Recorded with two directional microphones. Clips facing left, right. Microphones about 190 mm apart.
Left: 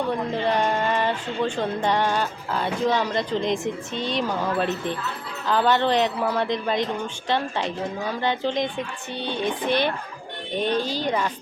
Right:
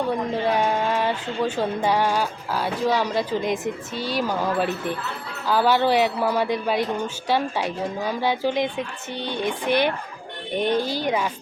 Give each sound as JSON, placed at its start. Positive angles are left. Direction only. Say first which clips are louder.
{"t": 0.1, "sound": "a woman's voice", "louder": "right 1 dB", "side_deg": -5}